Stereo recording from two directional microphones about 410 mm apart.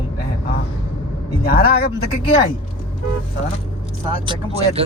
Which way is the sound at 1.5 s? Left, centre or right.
Left.